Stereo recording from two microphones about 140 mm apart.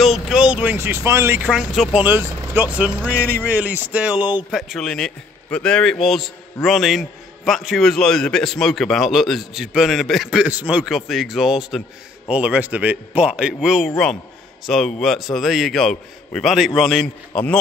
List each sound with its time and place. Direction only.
0.0 s speech: 5° right (ahead or behind)
1.5 s a man's voice: 5° right (ahead or behind)
4.6 s a man's voice: centre (ahead or behind)